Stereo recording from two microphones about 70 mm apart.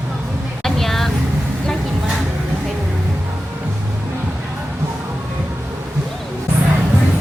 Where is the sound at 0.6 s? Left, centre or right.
Centre.